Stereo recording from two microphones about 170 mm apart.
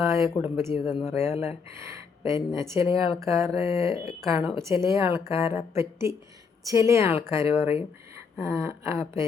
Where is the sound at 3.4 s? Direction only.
35° left (ahead or behind).